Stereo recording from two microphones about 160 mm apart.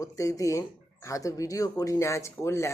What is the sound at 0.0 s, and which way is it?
Speech, 20° left (ahead or behind).